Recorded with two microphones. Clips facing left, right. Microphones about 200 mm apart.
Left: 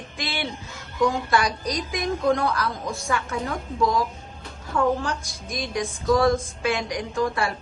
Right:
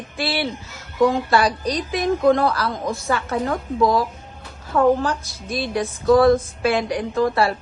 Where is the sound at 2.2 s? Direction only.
55° right (ahead or behind).